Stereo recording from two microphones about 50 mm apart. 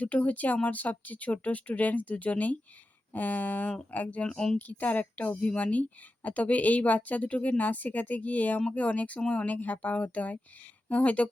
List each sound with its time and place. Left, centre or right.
0.0 s speech: left
4.3 s a woman's voice: centre
4.5 s speech: left